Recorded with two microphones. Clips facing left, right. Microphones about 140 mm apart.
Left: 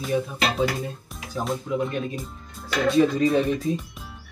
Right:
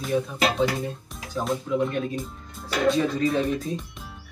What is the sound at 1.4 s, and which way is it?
Speech, centre (ahead or behind).